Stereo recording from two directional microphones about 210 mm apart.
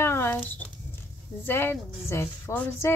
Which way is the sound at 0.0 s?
10° left (ahead or behind).